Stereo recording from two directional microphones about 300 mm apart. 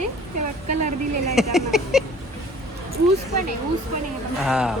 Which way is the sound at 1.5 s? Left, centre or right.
Centre.